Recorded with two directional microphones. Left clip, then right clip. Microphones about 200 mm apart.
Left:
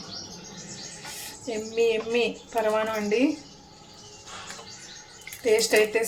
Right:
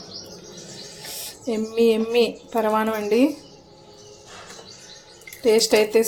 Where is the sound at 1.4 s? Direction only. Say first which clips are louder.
Right 5 dB; 35° right (ahead or behind).